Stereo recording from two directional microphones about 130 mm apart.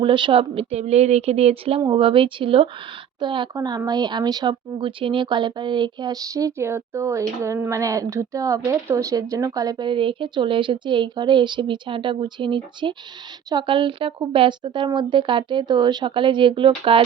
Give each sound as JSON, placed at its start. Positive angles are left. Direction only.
{"t": 0.0, "sound": "speech", "side_deg": -40}